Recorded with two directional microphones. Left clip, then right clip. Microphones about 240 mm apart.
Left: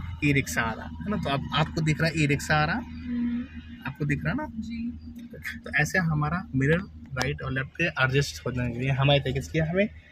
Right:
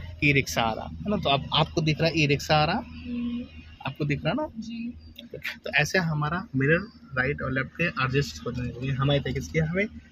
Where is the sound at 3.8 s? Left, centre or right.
Centre.